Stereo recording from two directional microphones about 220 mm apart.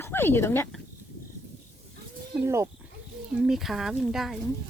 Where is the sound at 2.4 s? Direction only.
15° right (ahead or behind).